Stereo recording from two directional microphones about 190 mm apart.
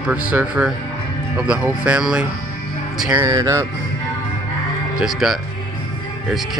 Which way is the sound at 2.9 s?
5° right (ahead or behind).